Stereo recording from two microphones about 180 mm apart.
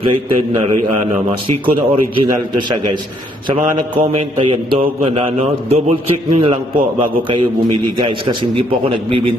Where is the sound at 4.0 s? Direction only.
35° right (ahead or behind).